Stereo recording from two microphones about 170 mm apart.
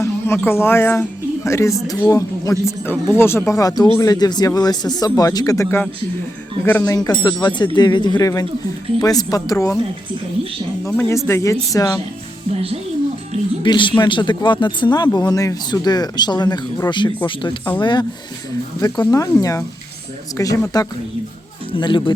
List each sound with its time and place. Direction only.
0.0 s speech: 15° left (ahead or behind)
10.8 s speech: 15° left (ahead or behind)
12.5 s speech: 35° right (ahead or behind)
13.6 s speech: 30° left (ahead or behind)